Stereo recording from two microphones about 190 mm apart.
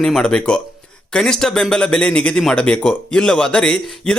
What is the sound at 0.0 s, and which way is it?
Speech, 5° left (ahead or behind).